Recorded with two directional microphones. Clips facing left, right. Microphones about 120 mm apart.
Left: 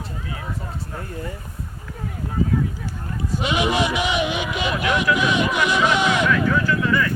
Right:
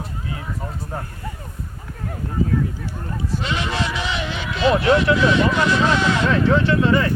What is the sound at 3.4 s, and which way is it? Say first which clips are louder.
Speech: left 5 dB; 15° left (ahead or behind).